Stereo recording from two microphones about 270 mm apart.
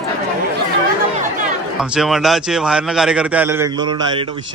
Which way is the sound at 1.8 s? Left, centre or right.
Centre.